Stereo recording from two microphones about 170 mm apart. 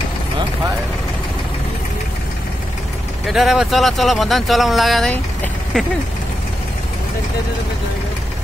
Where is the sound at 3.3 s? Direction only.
Centre (ahead or behind).